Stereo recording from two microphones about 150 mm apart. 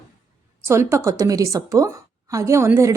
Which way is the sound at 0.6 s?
20° right (ahead or behind).